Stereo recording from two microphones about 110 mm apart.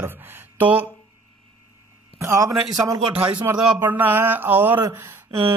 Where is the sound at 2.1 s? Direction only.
30° right (ahead or behind).